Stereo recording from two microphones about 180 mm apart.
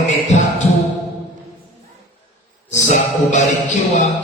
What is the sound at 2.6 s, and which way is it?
Music, 40° left (ahead or behind).